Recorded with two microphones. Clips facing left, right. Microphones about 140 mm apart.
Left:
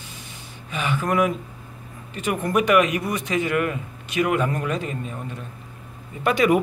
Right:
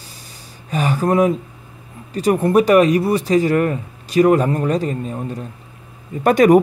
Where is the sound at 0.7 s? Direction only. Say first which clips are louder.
Right 6 dB; 40° right (ahead or behind).